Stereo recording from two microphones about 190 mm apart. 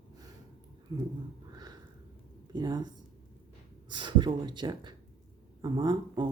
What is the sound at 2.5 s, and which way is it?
Speech, 20° right (ahead or behind).